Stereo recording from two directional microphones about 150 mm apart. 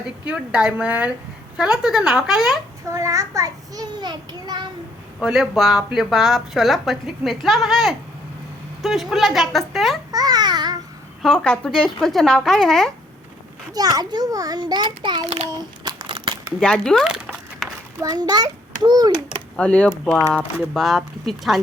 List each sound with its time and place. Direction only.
0.3 s a woman's voice: 5° right (ahead or behind)
2.9 s a child's voice: 20° right (ahead or behind)
5.2 s speech: centre (ahead or behind)
10.1 s babbling: 25° right (ahead or behind)
11.2 s speech: 5° left (ahead or behind)
13.7 s a child's voice: 25° right (ahead or behind)
15.4 s a sound: 25° right (ahead or behind)
16.6 s a sound: 5° left (ahead or behind)
18.0 s a child's voice: 25° right (ahead or behind)
19.5 s speech: 10° left (ahead or behind)